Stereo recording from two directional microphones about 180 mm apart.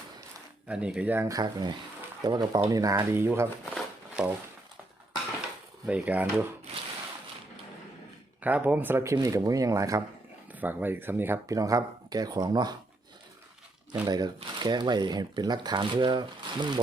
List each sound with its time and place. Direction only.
0.7 s speech: 5° right (ahead or behind)
3.8 s a sound: 5° right (ahead or behind)
5.8 s speech: 10° right (ahead or behind)
8.4 s speech: 10° right (ahead or behind)
14.0 s speech: 25° right (ahead or behind)